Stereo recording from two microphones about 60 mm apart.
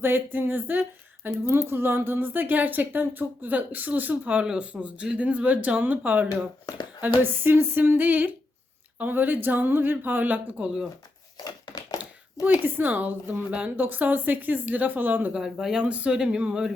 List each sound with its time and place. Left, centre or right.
0.0 s speech: right
1.3 s a woman's voice: right
7.0 s speech: right
11.4 s a sound: left
12.6 s a woman's voice: right
15.3 s speech: centre
15.8 s speech: right